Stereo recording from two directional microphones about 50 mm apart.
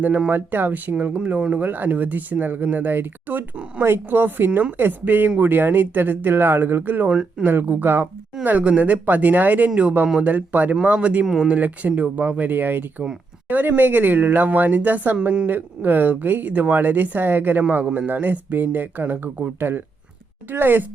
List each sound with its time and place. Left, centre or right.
0.3 s speech: right
0.9 s speech: right
3.5 s speech: right
3.8 s a woman's voice: right
7.1 s speech: right
7.4 s speech: right